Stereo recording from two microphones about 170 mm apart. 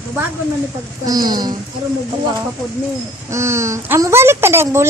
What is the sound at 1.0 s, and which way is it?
Speech, 25° right (ahead or behind).